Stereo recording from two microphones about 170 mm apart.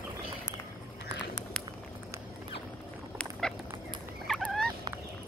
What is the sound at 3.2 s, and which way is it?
Rodents, 5° left (ahead or behind).